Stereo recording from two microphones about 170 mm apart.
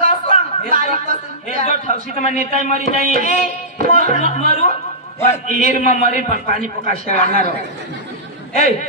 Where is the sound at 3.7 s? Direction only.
55° right (ahead or behind).